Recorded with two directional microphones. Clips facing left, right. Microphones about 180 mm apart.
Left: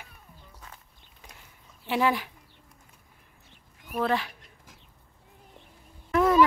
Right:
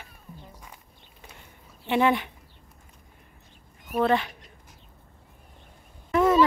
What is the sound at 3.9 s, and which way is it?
Speech, centre (ahead or behind).